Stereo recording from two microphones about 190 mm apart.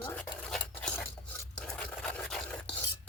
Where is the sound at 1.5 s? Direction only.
5° left (ahead or behind).